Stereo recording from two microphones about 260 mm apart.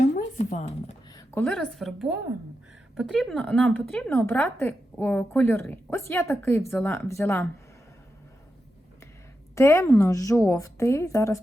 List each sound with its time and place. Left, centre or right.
0.0 s a sound: left
1.1 s a woman's voice: centre
9.6 s a woman's voice: centre